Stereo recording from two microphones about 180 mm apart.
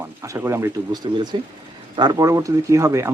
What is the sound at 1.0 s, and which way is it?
Speech, 25° right (ahead or behind).